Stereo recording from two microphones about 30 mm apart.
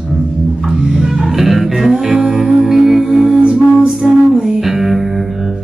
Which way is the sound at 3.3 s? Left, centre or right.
Right.